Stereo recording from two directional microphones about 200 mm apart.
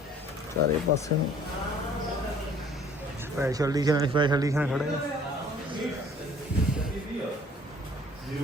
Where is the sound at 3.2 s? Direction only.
15° right (ahead or behind).